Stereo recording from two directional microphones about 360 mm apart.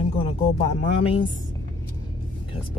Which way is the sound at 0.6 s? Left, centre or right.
Centre.